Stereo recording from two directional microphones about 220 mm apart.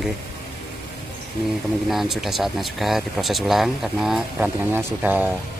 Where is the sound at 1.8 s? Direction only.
Centre (ahead or behind).